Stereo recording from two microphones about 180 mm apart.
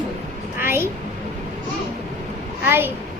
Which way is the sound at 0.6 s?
15° right (ahead or behind).